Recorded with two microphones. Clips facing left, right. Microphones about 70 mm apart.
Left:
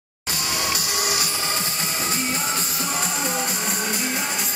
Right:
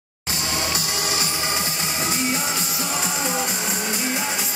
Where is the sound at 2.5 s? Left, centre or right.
Left.